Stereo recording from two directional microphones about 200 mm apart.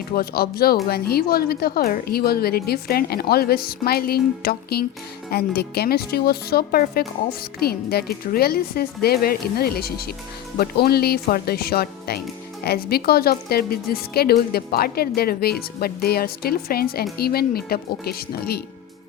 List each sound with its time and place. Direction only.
0.2 s a woman's voice: 50° left (ahead or behind)